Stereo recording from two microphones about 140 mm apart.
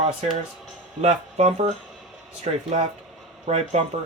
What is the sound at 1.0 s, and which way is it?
Speech, 50° right (ahead or behind).